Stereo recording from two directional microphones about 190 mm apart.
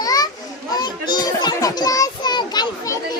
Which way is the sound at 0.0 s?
20° left (ahead or behind).